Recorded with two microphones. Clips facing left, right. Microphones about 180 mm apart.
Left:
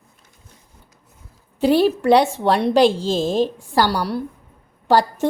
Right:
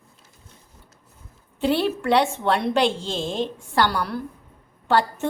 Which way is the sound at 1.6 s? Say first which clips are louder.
Left 6 dB; 40° left (ahead or behind).